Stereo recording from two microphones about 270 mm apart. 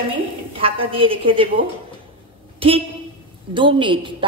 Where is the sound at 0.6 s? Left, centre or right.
Right.